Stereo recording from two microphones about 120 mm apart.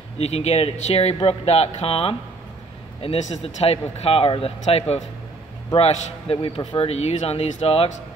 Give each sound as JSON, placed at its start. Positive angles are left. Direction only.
{"t": 0.2, "sound": "a man's voice", "side_deg": 60}
{"t": 6.6, "sound": "a man's voice", "side_deg": 45}
{"t": 6.9, "sound": "speech", "side_deg": 60}